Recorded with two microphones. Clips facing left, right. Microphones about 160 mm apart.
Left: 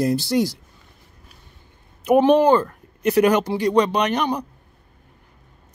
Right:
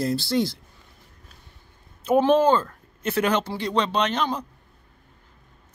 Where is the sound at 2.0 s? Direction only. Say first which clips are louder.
Left 4 dB; 15° left (ahead or behind).